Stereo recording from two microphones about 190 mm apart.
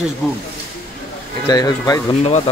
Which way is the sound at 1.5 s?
20° left (ahead or behind).